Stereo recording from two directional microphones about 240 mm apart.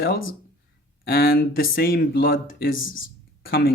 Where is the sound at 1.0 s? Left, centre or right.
Left.